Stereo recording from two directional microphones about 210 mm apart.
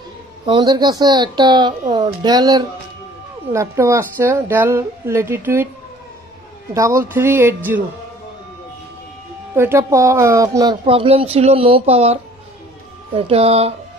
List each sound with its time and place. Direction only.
0.5 s a woman's voice: 20° right (ahead or behind)
6.7 s a woman's voice: 15° right (ahead or behind)
9.6 s speech: 10° right (ahead or behind); by 13.7 s 30° right (ahead or behind)